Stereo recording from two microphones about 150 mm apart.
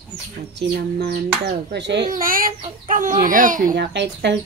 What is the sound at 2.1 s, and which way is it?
A child's voice, 70° right (ahead or behind).